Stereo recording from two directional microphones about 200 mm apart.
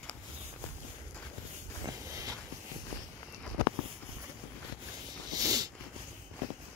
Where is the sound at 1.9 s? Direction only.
15° right (ahead or behind).